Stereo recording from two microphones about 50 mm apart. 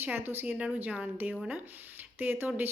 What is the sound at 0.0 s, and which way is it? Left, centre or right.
Speech, right.